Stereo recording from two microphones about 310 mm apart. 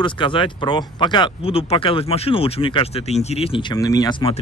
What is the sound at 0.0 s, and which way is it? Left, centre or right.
A man's voice, centre.